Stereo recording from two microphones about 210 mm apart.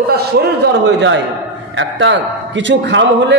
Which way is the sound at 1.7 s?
60° right (ahead or behind).